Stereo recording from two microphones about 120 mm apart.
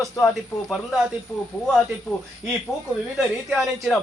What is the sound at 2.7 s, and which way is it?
Speech, 25° left (ahead or behind).